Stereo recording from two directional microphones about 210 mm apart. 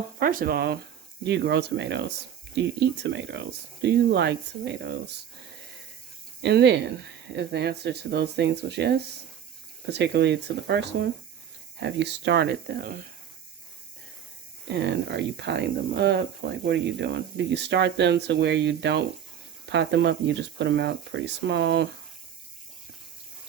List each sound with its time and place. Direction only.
0.2 s speech: 40° right (ahead or behind)
6.4 s speech: 55° right (ahead or behind)
14.7 s speech: 55° right (ahead or behind)